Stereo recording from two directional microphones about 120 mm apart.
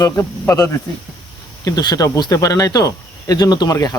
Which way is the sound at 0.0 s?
25° left (ahead or behind).